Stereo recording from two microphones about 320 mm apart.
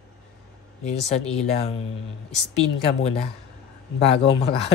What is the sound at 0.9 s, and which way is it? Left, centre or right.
Speech, centre.